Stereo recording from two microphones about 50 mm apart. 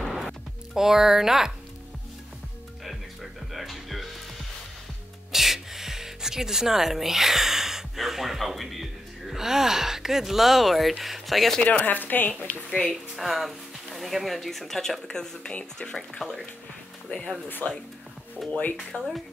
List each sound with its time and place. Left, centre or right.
0.0 s music: centre
2.8 s music: centre
5.3 s music: centre
9.3 s speech: centre
11.7 s speech: left
12.4 s speech: left
13.1 s speech: centre; by 16.1 s left
16.2 s speech: centre
17.1 s speech: left
18.4 s speech: centre
18.9 s speech: left